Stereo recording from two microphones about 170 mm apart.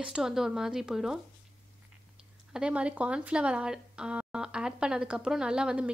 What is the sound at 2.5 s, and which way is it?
A woman's voice, 5° right (ahead or behind).